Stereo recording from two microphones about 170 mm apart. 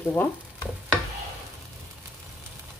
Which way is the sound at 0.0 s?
10° left (ahead or behind).